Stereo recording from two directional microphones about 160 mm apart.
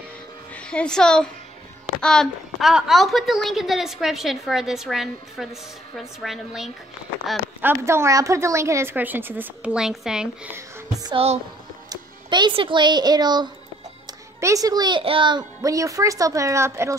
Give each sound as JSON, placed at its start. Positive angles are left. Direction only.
{"t": 0.6, "sound": "a woman's voice", "side_deg": 5}
{"t": 7.6, "sound": "a woman's voice", "side_deg": -15}
{"t": 11.0, "sound": "speech", "side_deg": -25}